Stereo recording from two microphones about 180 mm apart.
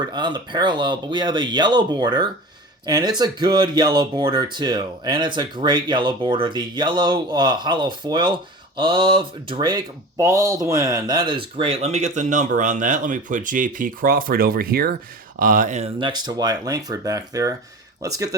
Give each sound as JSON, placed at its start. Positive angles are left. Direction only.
{"t": 0.0, "sound": "speech", "side_deg": -25}
{"t": 16.0, "sound": "speech", "side_deg": -25}